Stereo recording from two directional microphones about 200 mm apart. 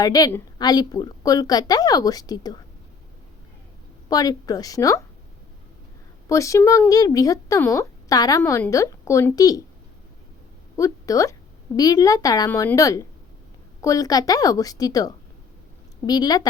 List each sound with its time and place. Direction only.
0.0 s a woman's voice: 20° left (ahead or behind)
4.1 s speech: 20° left (ahead or behind)
6.2 s speech: 15° left (ahead or behind)
10.8 s a woman's voice: 15° left (ahead or behind)